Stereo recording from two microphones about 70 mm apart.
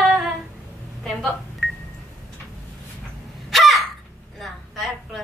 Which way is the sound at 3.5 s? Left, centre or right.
Centre.